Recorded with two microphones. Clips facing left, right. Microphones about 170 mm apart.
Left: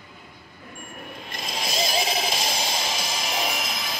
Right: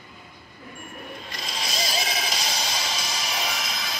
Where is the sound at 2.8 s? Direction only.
50° left (ahead or behind).